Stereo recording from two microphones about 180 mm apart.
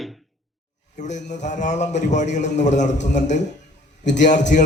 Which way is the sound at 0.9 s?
40° left (ahead or behind).